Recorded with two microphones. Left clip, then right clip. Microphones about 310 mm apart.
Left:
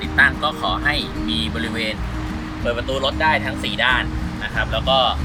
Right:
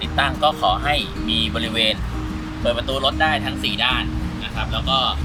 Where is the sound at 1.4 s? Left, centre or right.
Right.